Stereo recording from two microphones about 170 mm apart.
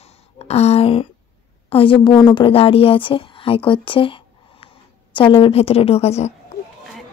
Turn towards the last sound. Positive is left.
turn(degrees=40)  # may be behind; listen again after turning